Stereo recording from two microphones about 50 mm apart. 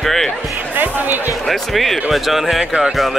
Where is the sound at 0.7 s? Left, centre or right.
Right.